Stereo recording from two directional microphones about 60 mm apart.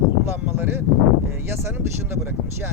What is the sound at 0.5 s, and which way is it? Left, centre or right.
Speech, right.